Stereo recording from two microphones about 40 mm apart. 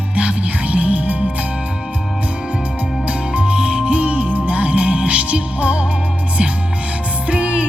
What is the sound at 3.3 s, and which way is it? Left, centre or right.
Music, right.